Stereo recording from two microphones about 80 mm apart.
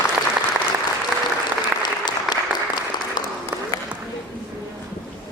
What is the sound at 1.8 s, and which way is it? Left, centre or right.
Applause, left.